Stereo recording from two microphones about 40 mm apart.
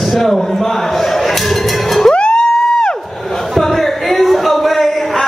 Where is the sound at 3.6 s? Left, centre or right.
Centre.